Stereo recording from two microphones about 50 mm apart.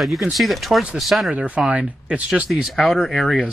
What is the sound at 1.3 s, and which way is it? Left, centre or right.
Speech, right.